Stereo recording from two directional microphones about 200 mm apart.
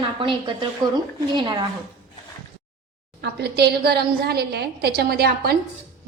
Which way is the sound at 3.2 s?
55° right (ahead or behind).